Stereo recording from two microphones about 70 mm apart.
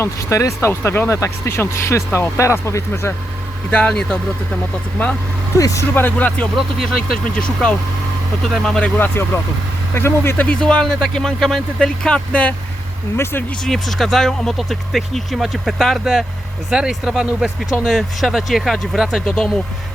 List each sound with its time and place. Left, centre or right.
0.0 s speech: left
3.7 s speech: centre
5.5 s speech: left
5.9 s speech: left
6.6 s speech: centre
9.0 s speech: left
10.4 s speech: centre
13.7 s speech: centre